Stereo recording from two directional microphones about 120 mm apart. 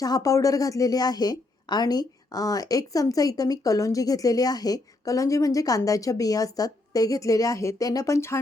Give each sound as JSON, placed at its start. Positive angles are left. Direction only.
{"t": 0.0, "sound": "a woman's voice", "side_deg": 30}